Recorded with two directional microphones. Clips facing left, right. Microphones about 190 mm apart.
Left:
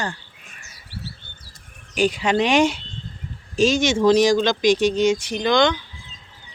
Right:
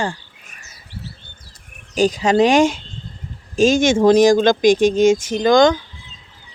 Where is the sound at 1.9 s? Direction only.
40° right (ahead or behind).